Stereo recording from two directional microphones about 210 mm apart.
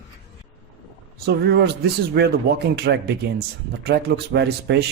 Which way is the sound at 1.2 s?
50° right (ahead or behind).